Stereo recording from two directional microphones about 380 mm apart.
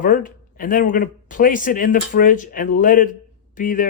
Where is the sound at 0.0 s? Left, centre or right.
Left.